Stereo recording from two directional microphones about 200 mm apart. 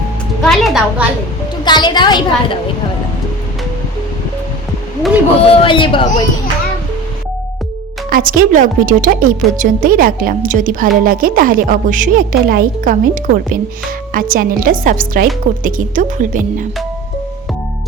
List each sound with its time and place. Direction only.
0.4 s a woman's voice: centre (ahead or behind)
1.6 s a woman's voice: 20° left (ahead or behind)
5.5 s a woman's voice: 25° left (ahead or behind)
8.1 s a woman's voice: 45° right (ahead or behind)